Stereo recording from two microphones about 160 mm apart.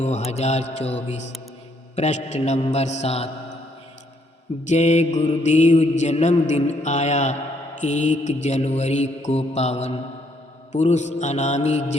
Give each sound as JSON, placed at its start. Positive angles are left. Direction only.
{"t": 0.0, "sound": "mantra", "side_deg": 45}
{"t": 4.6, "sound": "mantra", "side_deg": 45}